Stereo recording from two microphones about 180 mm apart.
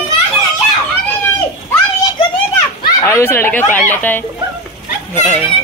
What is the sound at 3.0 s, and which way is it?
Speech, 15° left (ahead or behind).